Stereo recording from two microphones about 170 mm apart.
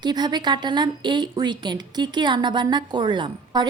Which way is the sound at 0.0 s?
25° right (ahead or behind).